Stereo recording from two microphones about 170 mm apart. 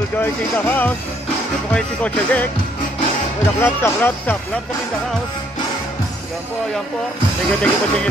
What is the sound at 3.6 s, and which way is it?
Speech, 15° left (ahead or behind).